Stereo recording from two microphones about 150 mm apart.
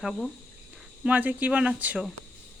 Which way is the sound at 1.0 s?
10° right (ahead or behind).